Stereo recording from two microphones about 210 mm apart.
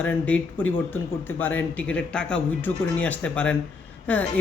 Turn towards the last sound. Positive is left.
turn(degrees=5)  # may be behind; listen again after turning